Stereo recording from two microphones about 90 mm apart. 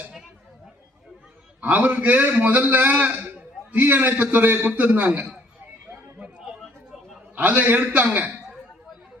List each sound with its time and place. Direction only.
0.0 s chatter: 10° right (ahead or behind)
1.6 s a man's voice: 20° right (ahead or behind)
5.9 s chatter: 15° right (ahead or behind)
7.3 s a man's voice: 20° right (ahead or behind)